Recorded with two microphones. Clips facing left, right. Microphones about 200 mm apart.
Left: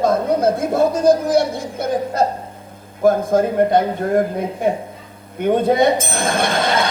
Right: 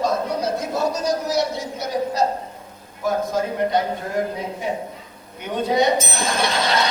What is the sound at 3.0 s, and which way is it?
Speech, 50° left (ahead or behind).